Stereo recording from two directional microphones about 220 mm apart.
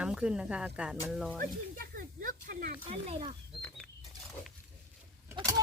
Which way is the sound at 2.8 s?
25° right (ahead or behind).